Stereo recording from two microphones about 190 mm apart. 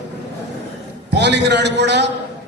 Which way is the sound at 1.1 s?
65° right (ahead or behind).